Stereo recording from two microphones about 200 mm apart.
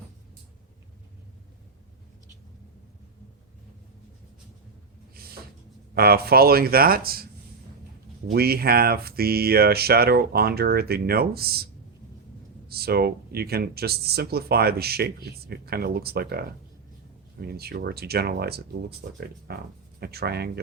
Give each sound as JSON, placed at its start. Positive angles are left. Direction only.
{"t": 5.1, "sound": "cupboard open or close", "side_deg": -50}
{"t": 5.9, "sound": "speech", "side_deg": -50}
{"t": 8.3, "sound": "speech", "side_deg": -50}